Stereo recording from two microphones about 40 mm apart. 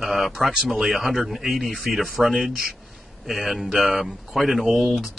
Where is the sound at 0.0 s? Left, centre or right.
Centre.